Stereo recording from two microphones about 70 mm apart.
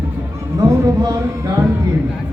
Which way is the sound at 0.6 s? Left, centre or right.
Right.